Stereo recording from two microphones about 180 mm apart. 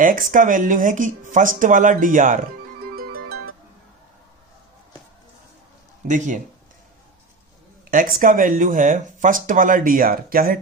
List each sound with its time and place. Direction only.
0.0 s speech: 50° right (ahead or behind)
2.9 s music: 55° right (ahead or behind)
6.1 s speech: 45° right (ahead or behind)
7.9 s speech: 50° right (ahead or behind)